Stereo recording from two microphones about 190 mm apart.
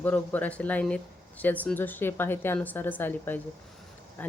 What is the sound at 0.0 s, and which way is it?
Speech, 10° left (ahead or behind).